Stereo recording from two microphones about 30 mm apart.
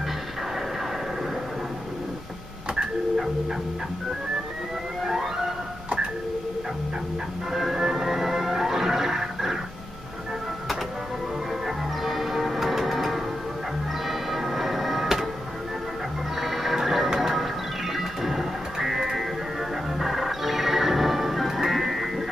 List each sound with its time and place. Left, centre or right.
5.0 s music: centre
7.5 s music: centre
11.6 s music: centre
14.0 s tick-tock: centre
16.3 s music: centre
20.0 s music: centre